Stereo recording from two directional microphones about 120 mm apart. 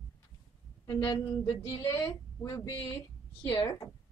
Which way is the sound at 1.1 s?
35° left (ahead or behind).